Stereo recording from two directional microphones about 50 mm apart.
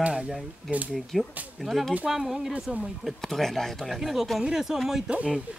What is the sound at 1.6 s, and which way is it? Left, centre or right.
Speech, centre.